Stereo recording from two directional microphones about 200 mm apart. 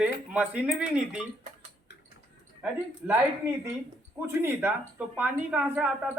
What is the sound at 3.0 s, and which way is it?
Speech, 5° right (ahead or behind).